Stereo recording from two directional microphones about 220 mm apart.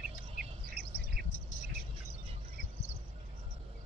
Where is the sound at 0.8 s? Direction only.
5° right (ahead or behind).